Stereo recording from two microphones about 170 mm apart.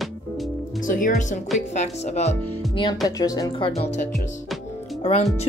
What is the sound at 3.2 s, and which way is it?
Speech, 25° left (ahead or behind).